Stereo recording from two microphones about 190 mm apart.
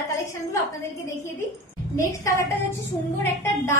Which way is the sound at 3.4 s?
15° left (ahead or behind).